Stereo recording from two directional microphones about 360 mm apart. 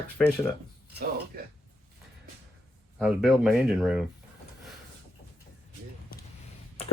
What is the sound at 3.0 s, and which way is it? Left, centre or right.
Speech, centre.